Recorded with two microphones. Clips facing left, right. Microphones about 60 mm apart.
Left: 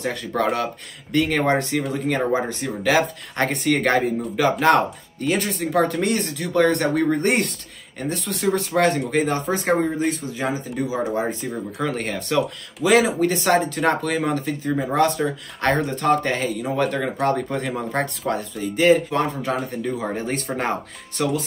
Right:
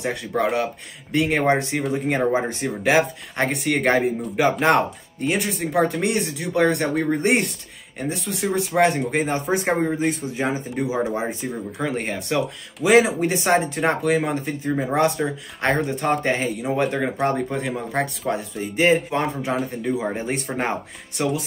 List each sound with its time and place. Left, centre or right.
0.0 s speech: centre
3.3 s speech: centre
18.6 s speech: right
19.5 s speech: centre
19.8 s speech: centre